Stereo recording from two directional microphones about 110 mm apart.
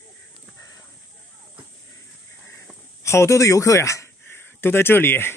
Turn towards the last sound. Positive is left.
turn(degrees=20)  # may be behind; listen again after turning